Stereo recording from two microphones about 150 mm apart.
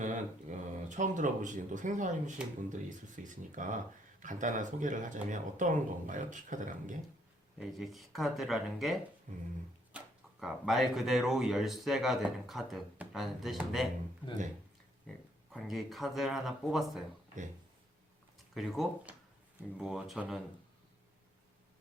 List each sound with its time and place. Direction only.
0.0 s speech: 55° right (ahead or behind)
7.6 s a man's voice: centre (ahead or behind)
9.3 s speech: 60° right (ahead or behind)
10.4 s a man's voice: centre (ahead or behind)
15.5 s a man's voice: centre (ahead or behind)
18.5 s a man's voice: centre (ahead or behind)